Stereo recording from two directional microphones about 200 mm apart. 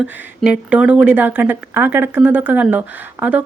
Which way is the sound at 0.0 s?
5° right (ahead or behind).